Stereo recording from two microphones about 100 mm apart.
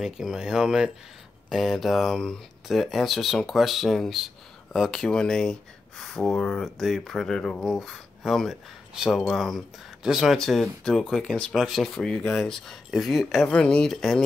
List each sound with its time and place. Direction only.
0.0 s speech: 5° right (ahead or behind)
11.5 s speech: 5° right (ahead or behind)